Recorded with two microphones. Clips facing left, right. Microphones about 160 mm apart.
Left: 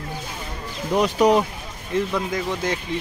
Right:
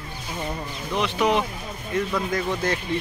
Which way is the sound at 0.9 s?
40° left (ahead or behind).